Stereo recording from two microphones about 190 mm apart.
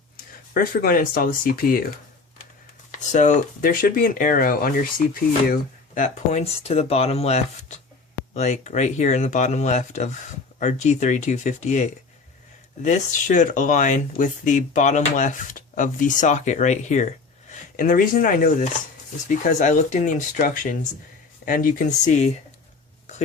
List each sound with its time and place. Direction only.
0.5 s speech: 50° left (ahead or behind)
2.9 s speech: 40° left (ahead or behind)